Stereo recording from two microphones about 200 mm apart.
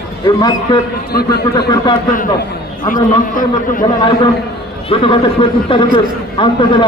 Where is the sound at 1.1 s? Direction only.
50° left (ahead or behind).